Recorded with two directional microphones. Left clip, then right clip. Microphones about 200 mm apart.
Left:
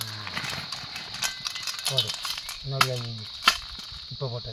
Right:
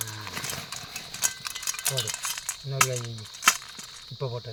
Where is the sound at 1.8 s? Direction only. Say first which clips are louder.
Left 5 dB; 30° right (ahead or behind).